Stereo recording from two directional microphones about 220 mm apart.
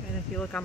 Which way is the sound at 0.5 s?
5° left (ahead or behind).